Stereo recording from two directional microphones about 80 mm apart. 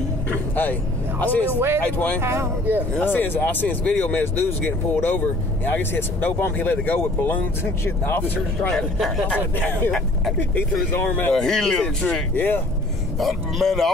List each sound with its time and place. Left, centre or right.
0.3 s music: left
1.2 s speech: left
2.2 s speech: right
3.0 s speech: left
8.7 s speech: centre
9.3 s speech: centre
11.3 s speech: centre
12.4 s speech: left
13.2 s speech: centre